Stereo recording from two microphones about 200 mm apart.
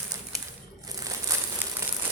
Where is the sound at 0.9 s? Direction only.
15° right (ahead or behind).